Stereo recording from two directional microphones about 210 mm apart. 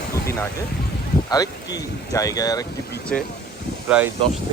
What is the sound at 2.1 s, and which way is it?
Speech, 15° left (ahead or behind).